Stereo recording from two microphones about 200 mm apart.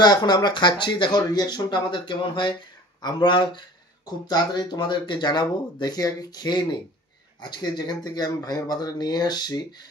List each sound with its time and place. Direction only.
0.0 s speech: 20° left (ahead or behind)